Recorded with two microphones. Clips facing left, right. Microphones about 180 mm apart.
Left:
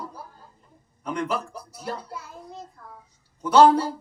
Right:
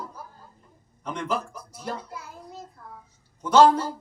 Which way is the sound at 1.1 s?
10° left (ahead or behind).